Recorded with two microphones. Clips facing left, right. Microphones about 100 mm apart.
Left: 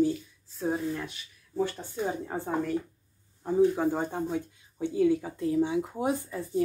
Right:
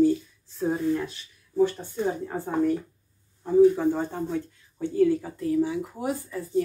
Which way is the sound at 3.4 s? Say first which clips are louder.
Right 5 dB; 15° left (ahead or behind).